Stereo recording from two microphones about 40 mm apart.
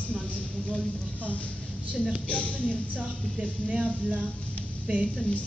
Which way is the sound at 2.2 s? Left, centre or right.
Left.